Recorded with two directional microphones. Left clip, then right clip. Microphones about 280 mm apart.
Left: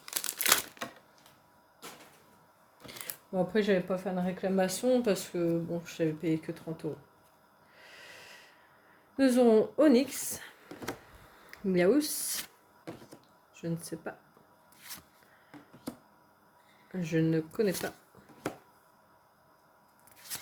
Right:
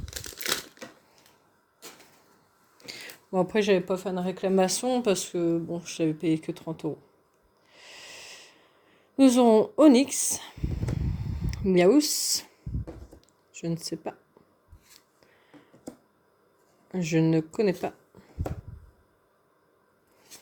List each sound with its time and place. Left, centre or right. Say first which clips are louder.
0.0 s crumpling: left 2 dB; centre
2.7 s speech: right 4 dB; right
7.7 s wheeze: right 5 dB; right
9.1 s speech: right 5 dB; right
11.5 s speech: right 6 dB; right
13.5 s speech: right 5 dB; right
16.9 s speech: right 5 dB; right